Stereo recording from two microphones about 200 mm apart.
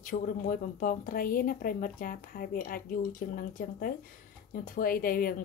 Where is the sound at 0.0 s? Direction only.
40° left (ahead or behind).